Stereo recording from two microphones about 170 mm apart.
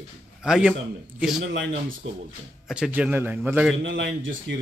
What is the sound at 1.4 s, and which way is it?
Speech, 90° right.